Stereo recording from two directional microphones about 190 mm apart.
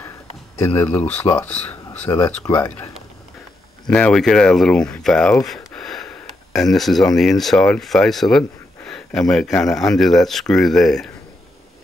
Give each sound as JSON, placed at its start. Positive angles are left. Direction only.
{"t": 0.6, "sound": "speech", "side_deg": 10}
{"t": 2.1, "sound": "speech", "side_deg": 20}
{"t": 3.8, "sound": "speech", "side_deg": 5}
{"t": 5.5, "sound": "sniff", "side_deg": 0}
{"t": 7.2, "sound": "speech", "side_deg": 0}